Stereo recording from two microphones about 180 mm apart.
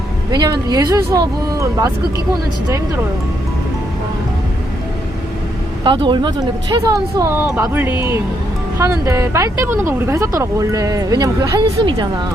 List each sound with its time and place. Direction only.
0.3 s speech: 20° right (ahead or behind)
5.8 s speech: 25° right (ahead or behind)